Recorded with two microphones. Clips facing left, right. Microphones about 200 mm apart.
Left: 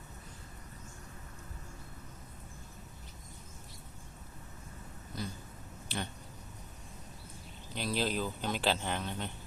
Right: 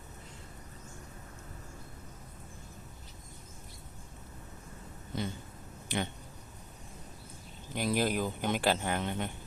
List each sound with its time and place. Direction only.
5.1 s a sound: 25° right (ahead or behind)
5.9 s speech: 15° right (ahead or behind)
7.8 s speech: 15° right (ahead or behind)